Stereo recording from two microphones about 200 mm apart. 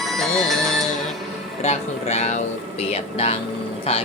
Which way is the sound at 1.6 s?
35° left (ahead or behind).